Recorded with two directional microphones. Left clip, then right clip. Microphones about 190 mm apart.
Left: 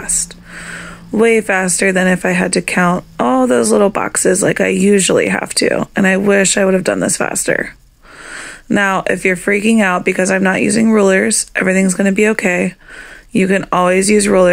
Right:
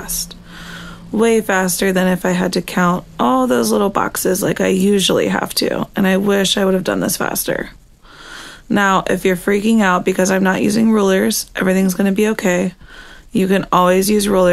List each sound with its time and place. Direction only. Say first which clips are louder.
0.7 s speech: left 4 dB; 15° left (ahead or behind)
8.3 s a sound: left 3 dB; 15° left (ahead or behind)
9.3 s speech: left 2 dB; 20° left (ahead or behind)